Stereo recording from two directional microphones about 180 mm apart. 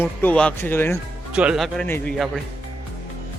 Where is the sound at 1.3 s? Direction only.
5° right (ahead or behind).